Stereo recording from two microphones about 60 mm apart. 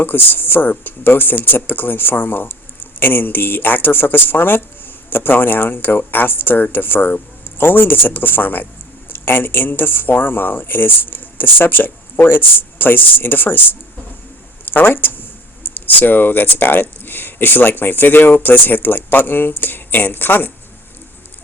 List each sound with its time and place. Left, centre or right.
0.0 s speech: left
14.7 s speech: left